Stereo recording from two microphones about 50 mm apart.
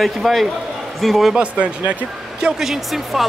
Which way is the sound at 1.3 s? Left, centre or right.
Right.